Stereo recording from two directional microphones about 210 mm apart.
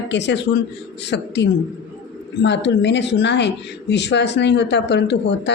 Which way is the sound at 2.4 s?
55° left (ahead or behind).